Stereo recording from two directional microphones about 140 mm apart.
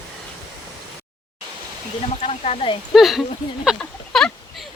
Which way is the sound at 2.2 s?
50° left (ahead or behind).